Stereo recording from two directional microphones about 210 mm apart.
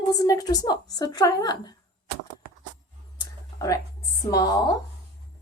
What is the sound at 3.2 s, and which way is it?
Whispering, 15° left (ahead or behind).